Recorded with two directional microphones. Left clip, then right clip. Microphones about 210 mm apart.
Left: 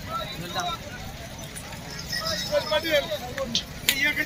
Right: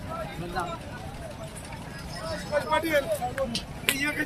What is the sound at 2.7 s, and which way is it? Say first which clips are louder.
Speech: even; 50° right (ahead or behind).